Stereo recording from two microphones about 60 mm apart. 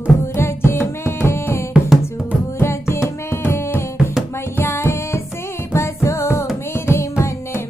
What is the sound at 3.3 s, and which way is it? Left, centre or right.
Music, left.